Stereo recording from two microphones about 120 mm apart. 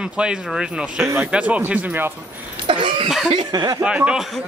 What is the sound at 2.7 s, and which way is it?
Cough, 45° right (ahead or behind).